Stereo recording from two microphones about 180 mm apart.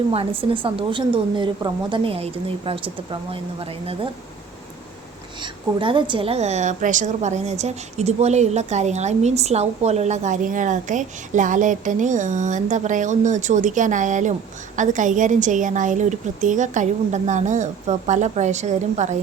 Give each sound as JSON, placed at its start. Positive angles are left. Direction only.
{"t": 0.1, "sound": "a woman's voice", "side_deg": -30}
{"t": 5.4, "sound": "a woman's voice", "side_deg": -25}